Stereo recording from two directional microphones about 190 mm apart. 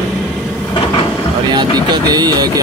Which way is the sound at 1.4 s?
25° right (ahead or behind).